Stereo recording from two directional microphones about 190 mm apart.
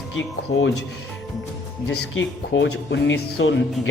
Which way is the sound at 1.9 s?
65° left (ahead or behind).